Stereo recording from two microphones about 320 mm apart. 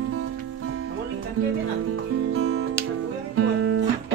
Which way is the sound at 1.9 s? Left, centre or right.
Right.